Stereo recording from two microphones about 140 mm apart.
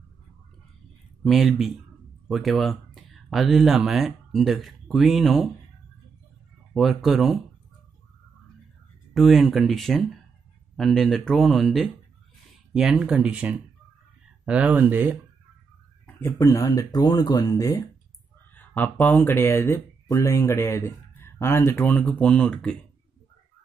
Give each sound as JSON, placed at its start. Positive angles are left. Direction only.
{"t": 1.2, "sound": "speech", "side_deg": 0}
{"t": 6.7, "sound": "speech", "side_deg": 0}
{"t": 9.1, "sound": "speech", "side_deg": 0}
{"t": 16.2, "sound": "speech", "side_deg": 20}
{"t": 18.5, "sound": "speech", "side_deg": 15}